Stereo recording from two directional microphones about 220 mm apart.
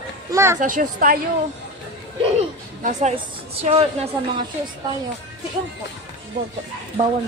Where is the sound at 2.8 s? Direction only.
35° right (ahead or behind).